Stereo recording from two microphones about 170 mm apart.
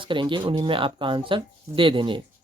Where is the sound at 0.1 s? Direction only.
30° right (ahead or behind).